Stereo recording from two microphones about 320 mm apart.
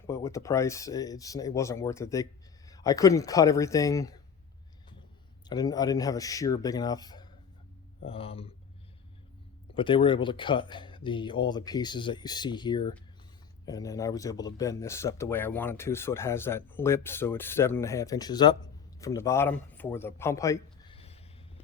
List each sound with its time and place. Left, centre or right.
0.1 s speech: centre
5.5 s speech: centre
9.7 s a man's voice: centre